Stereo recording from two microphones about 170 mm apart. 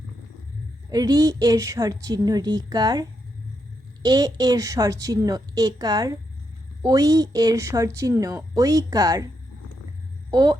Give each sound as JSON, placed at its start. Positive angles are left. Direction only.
{"t": 0.9, "sound": "a woman's voice", "side_deg": -20}
{"t": 10.3, "sound": "a woman's voice", "side_deg": -25}